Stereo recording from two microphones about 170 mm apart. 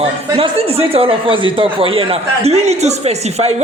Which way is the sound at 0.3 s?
35° right (ahead or behind).